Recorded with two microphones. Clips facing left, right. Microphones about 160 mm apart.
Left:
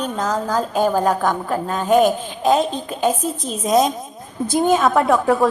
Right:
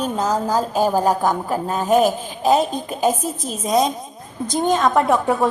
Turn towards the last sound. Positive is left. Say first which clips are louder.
# left 2 dB
turn(degrees=0)  # may be behind; listen again after turning